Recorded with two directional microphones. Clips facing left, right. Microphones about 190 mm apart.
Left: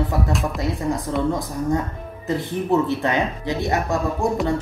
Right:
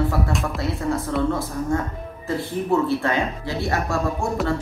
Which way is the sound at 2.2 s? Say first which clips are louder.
Left 1 dB; 20° left (ahead or behind).